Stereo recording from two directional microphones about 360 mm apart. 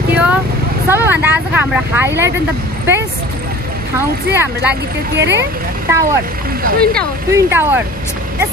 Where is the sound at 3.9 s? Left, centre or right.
Centre.